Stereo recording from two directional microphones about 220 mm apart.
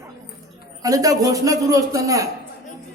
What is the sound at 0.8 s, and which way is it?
A man's voice, 15° right (ahead or behind).